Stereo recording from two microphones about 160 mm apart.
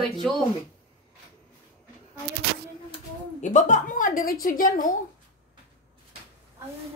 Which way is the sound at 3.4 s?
50° left (ahead or behind).